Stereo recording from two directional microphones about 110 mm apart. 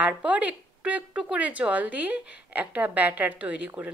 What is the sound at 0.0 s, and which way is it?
A woman's voice, 15° right (ahead or behind).